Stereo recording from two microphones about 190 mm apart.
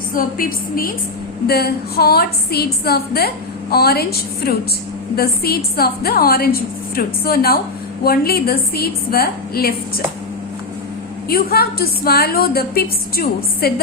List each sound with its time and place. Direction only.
0.1 s a woman's voice: 50° left (ahead or behind)
5.1 s a woman's voice: 55° left (ahead or behind)
11.3 s a woman's voice: 55° left (ahead or behind)